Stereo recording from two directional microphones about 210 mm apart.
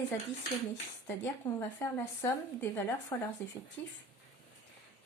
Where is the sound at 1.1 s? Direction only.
10° left (ahead or behind).